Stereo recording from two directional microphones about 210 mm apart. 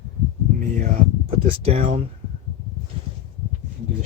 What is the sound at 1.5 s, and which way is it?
Speech, 25° right (ahead or behind).